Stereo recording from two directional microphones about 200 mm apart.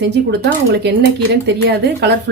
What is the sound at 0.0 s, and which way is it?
Speech, 55° right (ahead or behind).